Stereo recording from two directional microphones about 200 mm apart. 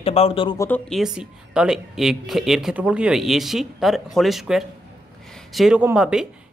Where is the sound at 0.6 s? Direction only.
10° left (ahead or behind).